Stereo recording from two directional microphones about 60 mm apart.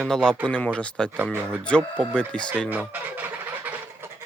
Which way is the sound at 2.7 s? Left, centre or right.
Right.